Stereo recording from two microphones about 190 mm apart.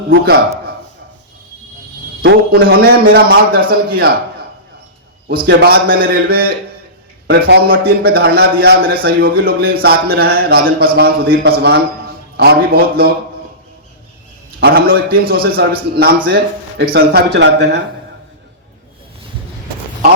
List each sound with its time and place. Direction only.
2.2 s a man's voice: 55° right (ahead or behind)
5.5 s a man's voice: 55° right (ahead or behind)
14.6 s a man's voice: 55° right (ahead or behind)